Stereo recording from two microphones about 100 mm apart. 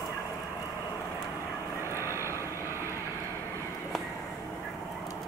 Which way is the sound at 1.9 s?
25° right (ahead or behind).